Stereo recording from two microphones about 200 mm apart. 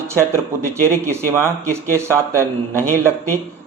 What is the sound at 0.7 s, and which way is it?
Speech, 15° right (ahead or behind).